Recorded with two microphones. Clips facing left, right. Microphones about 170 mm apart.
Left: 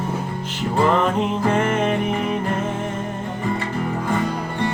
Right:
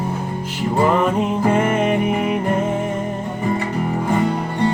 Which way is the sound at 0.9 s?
10° right (ahead or behind).